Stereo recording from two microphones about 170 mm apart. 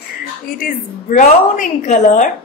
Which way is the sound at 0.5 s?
55° left (ahead or behind).